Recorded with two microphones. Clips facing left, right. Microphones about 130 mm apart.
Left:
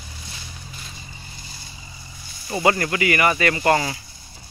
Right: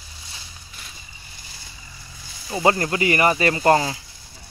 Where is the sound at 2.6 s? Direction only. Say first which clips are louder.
Right 1 dB; 25° right (ahead or behind).